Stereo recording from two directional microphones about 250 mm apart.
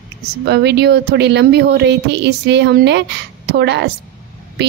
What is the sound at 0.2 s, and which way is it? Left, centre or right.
Speech, right.